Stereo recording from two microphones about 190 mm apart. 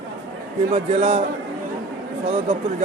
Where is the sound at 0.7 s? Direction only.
30° right (ahead or behind).